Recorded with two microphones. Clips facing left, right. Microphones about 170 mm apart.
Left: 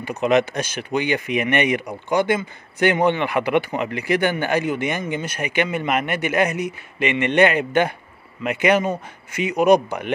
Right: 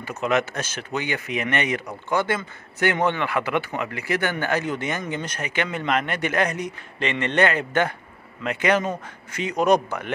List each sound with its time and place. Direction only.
0.0 s speech: 15° left (ahead or behind)